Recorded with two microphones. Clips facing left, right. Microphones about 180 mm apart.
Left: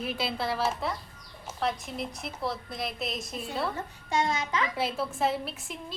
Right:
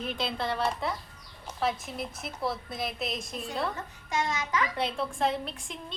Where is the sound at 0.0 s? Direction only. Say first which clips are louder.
Left 1 dB; 5° left (ahead or behind).